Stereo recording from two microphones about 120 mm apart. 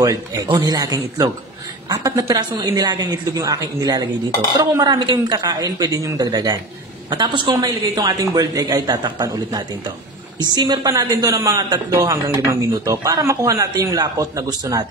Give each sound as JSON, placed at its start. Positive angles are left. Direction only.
{"t": 0.0, "sound": "a woman's voice", "side_deg": -30}